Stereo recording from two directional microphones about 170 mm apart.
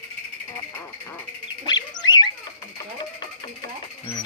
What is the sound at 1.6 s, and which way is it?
Dog, 25° left (ahead or behind).